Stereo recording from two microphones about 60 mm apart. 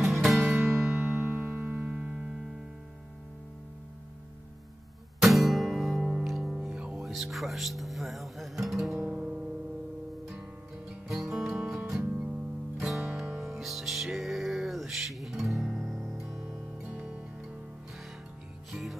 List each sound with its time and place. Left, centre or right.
0.0 s music: centre
0.9 s music: right; by 2.4 s centre
5.2 s music: centre
6.8 s music: centre
7.1 s speech: centre
9.1 s music: centre
10.9 s music: centre
12.1 s music: centre
12.8 s music: centre
16.2 s music: centre
16.8 s music: centre
18.7 s music: centre